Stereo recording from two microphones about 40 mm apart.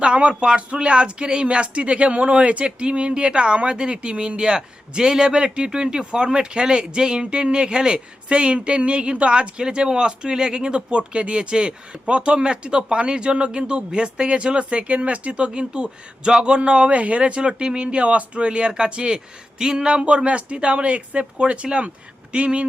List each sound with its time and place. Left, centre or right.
0.0 s speech: right